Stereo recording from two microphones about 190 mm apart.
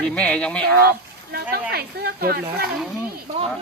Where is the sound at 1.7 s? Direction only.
55° right (ahead or behind).